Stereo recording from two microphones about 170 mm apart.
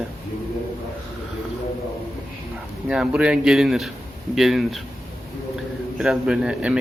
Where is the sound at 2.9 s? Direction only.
5° right (ahead or behind).